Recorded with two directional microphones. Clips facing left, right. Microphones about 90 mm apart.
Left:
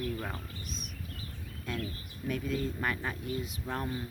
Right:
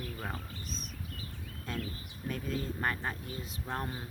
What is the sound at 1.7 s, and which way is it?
Speech, 35° right (ahead or behind).